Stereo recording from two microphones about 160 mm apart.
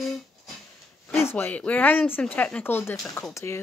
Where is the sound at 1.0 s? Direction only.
15° left (ahead or behind).